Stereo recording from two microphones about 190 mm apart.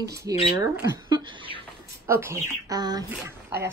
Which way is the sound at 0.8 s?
20° right (ahead or behind).